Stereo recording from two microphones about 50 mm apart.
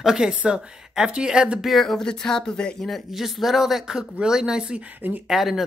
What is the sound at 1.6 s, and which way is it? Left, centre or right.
Speech, centre.